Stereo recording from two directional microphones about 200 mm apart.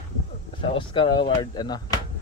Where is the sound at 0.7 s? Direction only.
25° left (ahead or behind).